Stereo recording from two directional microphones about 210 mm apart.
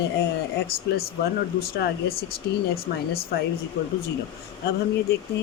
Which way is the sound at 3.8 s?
45° left (ahead or behind).